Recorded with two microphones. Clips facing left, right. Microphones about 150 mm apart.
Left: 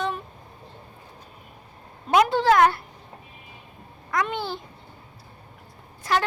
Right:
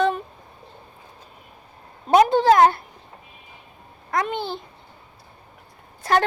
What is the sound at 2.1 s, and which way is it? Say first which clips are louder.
Speech: right 4 dB; 40° right (ahead or behind).